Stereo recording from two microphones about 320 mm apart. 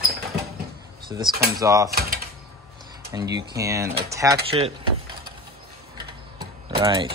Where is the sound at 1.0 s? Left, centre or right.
Centre.